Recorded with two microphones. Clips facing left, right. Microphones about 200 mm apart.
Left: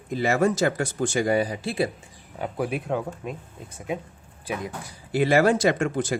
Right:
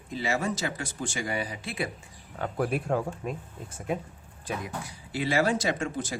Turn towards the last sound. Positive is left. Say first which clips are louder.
# left 7 dB
turn(degrees=60)  # may be behind; listen again after turning